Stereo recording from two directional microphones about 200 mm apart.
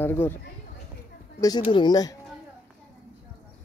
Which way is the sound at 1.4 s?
20° left (ahead or behind).